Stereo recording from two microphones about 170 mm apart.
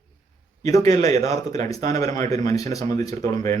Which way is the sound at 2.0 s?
20° left (ahead or behind).